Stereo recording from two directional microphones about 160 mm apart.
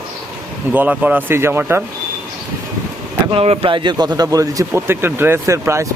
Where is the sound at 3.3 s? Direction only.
40° right (ahead or behind); by 5.9 s 15° right (ahead or behind).